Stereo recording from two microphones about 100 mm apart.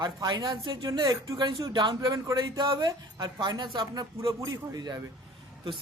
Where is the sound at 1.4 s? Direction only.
50° right (ahead or behind).